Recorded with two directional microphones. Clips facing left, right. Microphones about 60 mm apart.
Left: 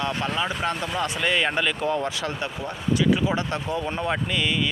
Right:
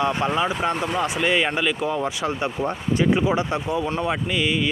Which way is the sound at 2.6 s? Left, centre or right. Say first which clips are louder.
Right 1 dB; right.